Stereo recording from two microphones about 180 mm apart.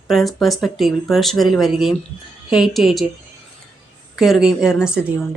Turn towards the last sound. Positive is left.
turn(degrees=-5)  # may be behind; listen again after turning